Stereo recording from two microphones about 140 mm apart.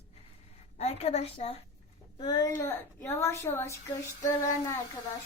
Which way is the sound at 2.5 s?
15° left (ahead or behind).